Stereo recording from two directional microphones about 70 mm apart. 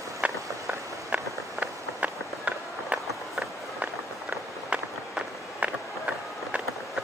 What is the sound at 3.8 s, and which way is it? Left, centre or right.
Run, centre.